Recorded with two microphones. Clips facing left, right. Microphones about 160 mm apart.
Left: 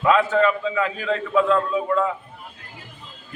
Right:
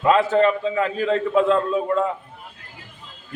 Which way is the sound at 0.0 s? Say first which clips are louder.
Right 1 dB; 35° right (ahead or behind).